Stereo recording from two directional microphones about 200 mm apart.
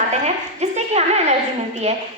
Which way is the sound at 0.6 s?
35° right (ahead or behind).